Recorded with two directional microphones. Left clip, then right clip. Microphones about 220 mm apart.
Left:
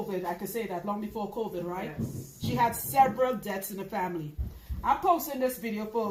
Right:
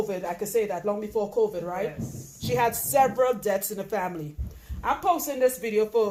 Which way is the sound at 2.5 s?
45° right (ahead or behind).